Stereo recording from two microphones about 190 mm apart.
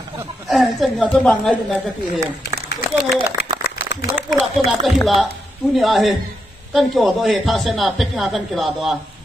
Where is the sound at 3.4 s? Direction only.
60° left (ahead or behind).